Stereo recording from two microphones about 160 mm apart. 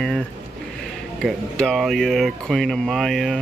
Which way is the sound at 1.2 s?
Centre (ahead or behind).